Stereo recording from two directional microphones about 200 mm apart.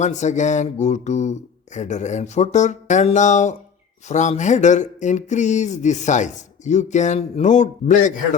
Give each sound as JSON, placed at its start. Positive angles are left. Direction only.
{"t": 0.0, "sound": "speech", "side_deg": 35}